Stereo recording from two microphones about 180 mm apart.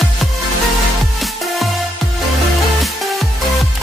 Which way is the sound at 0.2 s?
Centre (ahead or behind).